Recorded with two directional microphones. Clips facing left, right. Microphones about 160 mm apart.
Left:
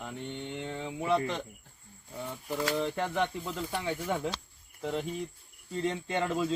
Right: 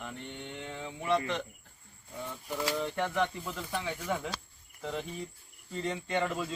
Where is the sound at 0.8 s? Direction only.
10° left (ahead or behind).